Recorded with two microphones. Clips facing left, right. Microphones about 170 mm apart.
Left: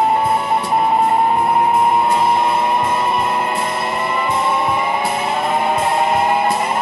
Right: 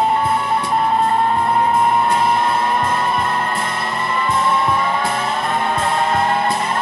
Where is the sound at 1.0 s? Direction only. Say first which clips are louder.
Left 2 dB; 15° left (ahead or behind).